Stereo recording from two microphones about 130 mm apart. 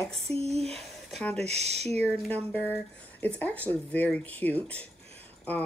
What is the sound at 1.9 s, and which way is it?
Speech, 10° left (ahead or behind).